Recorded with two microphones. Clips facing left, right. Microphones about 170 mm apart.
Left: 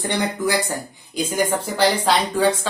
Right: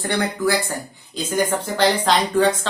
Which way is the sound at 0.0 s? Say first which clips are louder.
Right 1 dB; 20° left (ahead or behind).